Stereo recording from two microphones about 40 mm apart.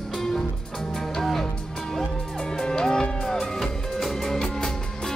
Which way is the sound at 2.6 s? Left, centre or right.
Centre.